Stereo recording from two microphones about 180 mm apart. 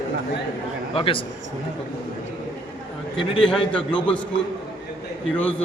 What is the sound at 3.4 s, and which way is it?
Speech, 5° left (ahead or behind).